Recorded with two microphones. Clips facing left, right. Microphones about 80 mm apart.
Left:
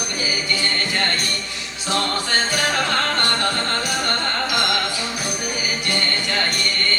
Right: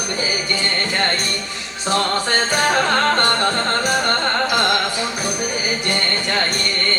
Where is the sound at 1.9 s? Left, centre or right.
Right.